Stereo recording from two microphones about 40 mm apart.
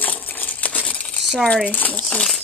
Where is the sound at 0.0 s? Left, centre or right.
Left.